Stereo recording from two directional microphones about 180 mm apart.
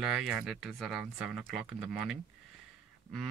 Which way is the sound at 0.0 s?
5° right (ahead or behind).